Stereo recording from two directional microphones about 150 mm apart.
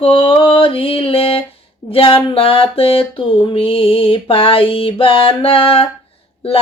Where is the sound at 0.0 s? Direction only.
35° left (ahead or behind).